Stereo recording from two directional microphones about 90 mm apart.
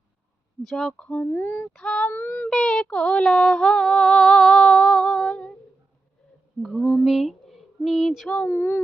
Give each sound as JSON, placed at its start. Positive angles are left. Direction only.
{"t": 0.6, "sound": "speech", "side_deg": 0}
{"t": 1.0, "sound": "female singing", "side_deg": 15}
{"t": 1.5, "sound": "speech", "side_deg": 25}
{"t": 1.7, "sound": "female singing", "side_deg": 10}
{"t": 2.1, "sound": "speech", "side_deg": 20}
{"t": 2.5, "sound": "female singing", "side_deg": 5}
{"t": 6.6, "sound": "a sound", "side_deg": 0}
{"t": 8.3, "sound": "speech", "side_deg": 15}